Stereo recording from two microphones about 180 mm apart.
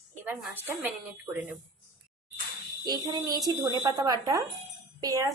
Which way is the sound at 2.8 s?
25° right (ahead or behind).